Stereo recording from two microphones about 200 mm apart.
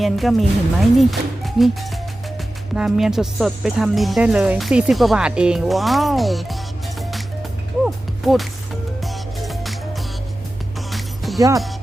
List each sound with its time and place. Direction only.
0.0 s speech: centre (ahead or behind)
7.9 s music: centre (ahead or behind)
10.9 s music: centre (ahead or behind)
11.3 s speech: 15° right (ahead or behind)